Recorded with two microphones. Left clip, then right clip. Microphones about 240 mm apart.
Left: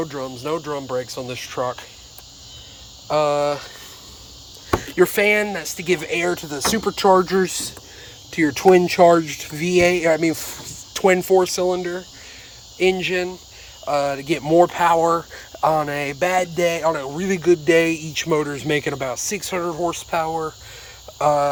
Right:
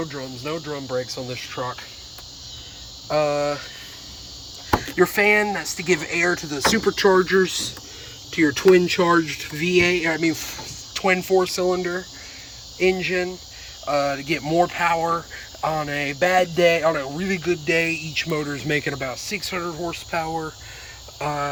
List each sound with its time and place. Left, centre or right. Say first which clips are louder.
0.0 s speech: left 3 dB; centre
3.1 s speech: left 2 dB; centre
4.7 s speech: left 2 dB; centre